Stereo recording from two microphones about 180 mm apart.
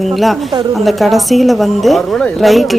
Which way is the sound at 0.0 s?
Centre (ahead or behind).